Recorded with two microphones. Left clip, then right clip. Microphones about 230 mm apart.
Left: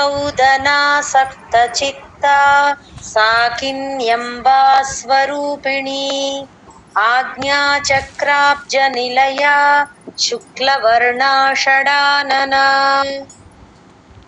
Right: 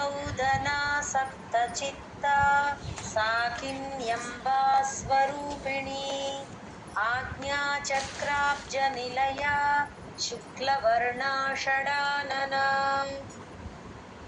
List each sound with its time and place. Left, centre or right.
0.0 s female singing: left